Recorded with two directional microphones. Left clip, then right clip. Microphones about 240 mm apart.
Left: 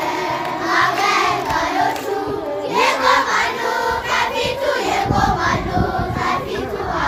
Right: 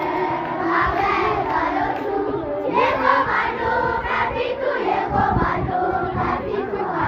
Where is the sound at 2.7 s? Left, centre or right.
Left.